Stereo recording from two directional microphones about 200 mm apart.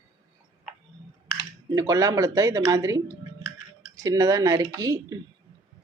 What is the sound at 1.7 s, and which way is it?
Speech, 15° right (ahead or behind).